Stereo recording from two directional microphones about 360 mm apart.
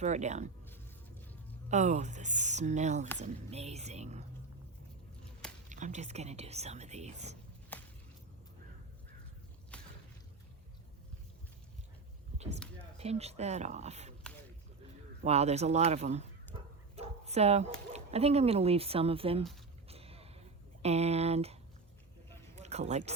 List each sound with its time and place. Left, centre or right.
0.0 s speech: centre
1.7 s speech: centre
5.2 s a sound: centre
5.6 s speech: right
7.7 s a sound: centre
9.7 s boat: centre
13.0 s speech: centre
15.2 s speech: centre
16.9 s bow-wow: centre
17.9 s speech: centre
19.9 s a sound: centre
20.8 s speech: centre
22.5 s a sound: centre